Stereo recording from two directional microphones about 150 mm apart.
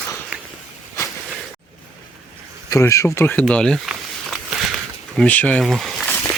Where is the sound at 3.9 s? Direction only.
5° right (ahead or behind).